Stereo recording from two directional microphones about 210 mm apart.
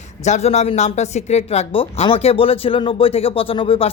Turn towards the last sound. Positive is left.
turn(degrees=25)  # may be behind; listen again after turning